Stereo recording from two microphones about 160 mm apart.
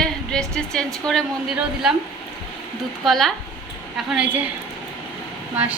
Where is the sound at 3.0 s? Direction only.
Centre (ahead or behind).